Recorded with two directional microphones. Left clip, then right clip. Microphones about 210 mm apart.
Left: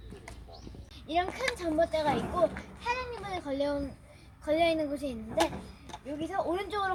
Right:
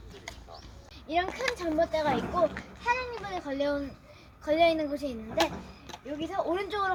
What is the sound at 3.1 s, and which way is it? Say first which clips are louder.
Speech: right 1 dB; centre (ahead or behind).